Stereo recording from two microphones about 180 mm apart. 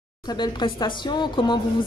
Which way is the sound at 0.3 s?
25° left (ahead or behind).